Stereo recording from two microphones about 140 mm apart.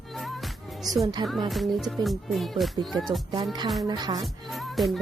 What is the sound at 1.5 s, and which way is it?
Music, centre (ahead or behind).